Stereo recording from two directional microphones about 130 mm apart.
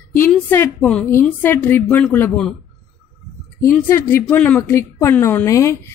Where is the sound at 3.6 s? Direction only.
20° left (ahead or behind).